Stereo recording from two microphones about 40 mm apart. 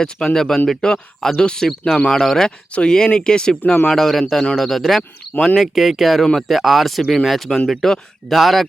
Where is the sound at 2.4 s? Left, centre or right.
Centre.